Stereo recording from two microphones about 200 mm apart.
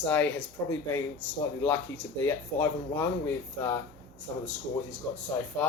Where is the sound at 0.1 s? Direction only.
5° left (ahead or behind).